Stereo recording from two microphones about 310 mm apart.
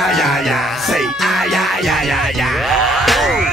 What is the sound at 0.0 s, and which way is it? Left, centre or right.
Music, centre.